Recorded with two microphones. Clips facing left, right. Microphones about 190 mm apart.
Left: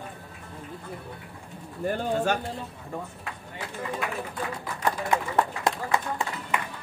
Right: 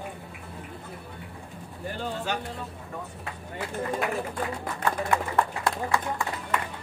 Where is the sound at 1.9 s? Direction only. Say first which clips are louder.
Left 6 dB; 50° left (ahead or behind).